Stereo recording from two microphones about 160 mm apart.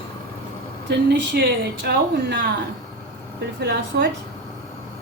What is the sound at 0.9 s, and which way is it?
Speech, 90° right.